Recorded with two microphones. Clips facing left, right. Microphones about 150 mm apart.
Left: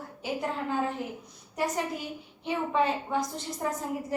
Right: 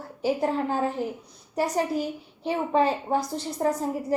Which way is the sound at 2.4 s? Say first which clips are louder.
Right 4 dB; 35° right (ahead or behind).